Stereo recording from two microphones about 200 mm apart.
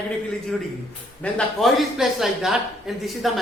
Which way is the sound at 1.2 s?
Centre (ahead or behind).